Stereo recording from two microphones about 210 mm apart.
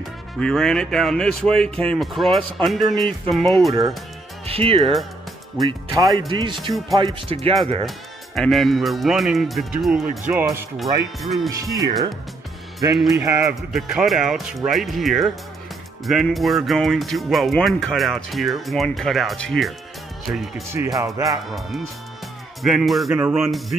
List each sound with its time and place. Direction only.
0.4 s speech: 5° left (ahead or behind)
4.5 s speech: 25° right (ahead or behind)
8.4 s speech: centre (ahead or behind)
11.4 s speech: 15° right (ahead or behind)
13.6 s speech: centre (ahead or behind)
20.7 s speech: 10° right (ahead or behind)
21.5 s speech: centre (ahead or behind)